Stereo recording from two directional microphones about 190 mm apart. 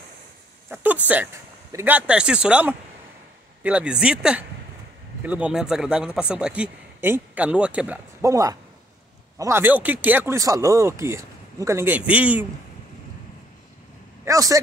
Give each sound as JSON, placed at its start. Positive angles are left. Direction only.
{"t": 0.7, "sound": "a man's voice", "side_deg": -10}
{"t": 14.2, "sound": "a man's voice", "side_deg": -15}